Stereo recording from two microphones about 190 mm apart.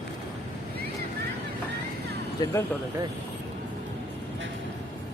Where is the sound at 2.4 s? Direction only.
15° left (ahead or behind).